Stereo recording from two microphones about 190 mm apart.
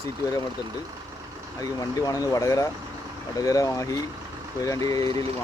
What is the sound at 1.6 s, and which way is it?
Speech, 20° left (ahead or behind).